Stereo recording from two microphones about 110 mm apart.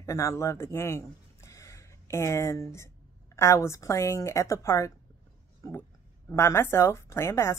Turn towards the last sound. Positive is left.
turn(degrees=25)  # may be behind; listen again after turning